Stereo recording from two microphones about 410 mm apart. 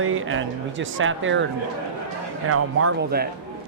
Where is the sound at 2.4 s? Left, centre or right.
Right.